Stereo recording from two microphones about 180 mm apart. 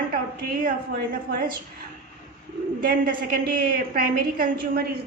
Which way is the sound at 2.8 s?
55° right (ahead or behind).